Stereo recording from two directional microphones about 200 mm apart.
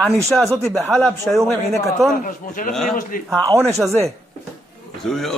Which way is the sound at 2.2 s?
45° left (ahead or behind).